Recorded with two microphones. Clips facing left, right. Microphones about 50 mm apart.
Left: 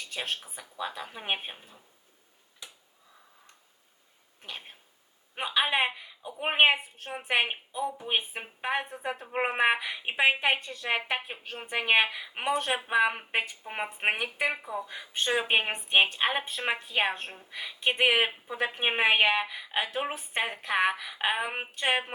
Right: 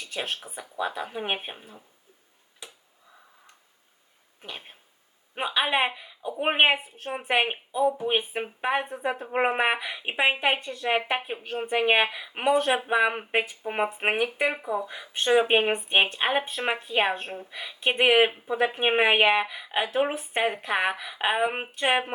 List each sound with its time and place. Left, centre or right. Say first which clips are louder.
0.2 s a woman's voice: right 3 dB; right
1.5 s a woman's voice: right 6 dB; right
4.4 s a woman's voice: right 2 dB; centre
8.9 s a woman's voice: right 5 dB; right
9.2 s speech: right 1 dB; centre
11.4 s a woman's voice: right 9 dB; right
11.7 s speech: right 2 dB; centre
14.8 s speech: right 1 dB; centre
15.3 s a woman's voice: right 7 dB; centre
17.2 s a woman's voice: right 5 dB; right
17.5 s speech: right 2 dB; centre
20.7 s speech: right 1 dB; centre